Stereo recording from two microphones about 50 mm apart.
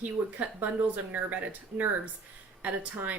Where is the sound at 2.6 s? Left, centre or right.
Right.